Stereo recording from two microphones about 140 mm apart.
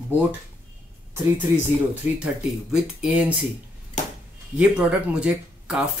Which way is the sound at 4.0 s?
60° left (ahead or behind).